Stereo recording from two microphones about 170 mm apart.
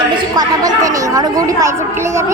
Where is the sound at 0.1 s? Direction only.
25° right (ahead or behind).